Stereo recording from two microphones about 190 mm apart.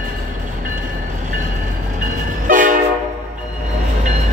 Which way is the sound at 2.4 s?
45° right (ahead or behind).